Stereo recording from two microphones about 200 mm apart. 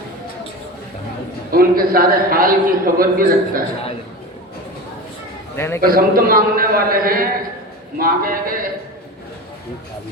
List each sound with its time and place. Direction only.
1.5 s a man's voice: 45° right (ahead or behind)
5.5 s a man's voice: 10° left (ahead or behind)
5.8 s a man's voice: 45° right (ahead or behind)